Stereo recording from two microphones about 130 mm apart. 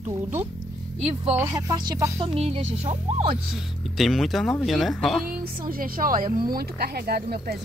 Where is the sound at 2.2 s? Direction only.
45° right (ahead or behind).